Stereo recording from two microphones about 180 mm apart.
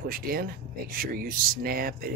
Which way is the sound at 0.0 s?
55° right (ahead or behind).